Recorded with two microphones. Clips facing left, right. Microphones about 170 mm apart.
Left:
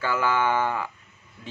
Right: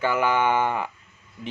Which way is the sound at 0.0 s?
20° right (ahead or behind).